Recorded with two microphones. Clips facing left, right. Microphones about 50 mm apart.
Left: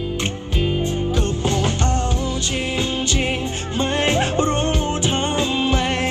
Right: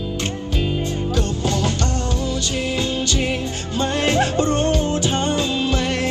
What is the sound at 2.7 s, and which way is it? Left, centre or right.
Music, left.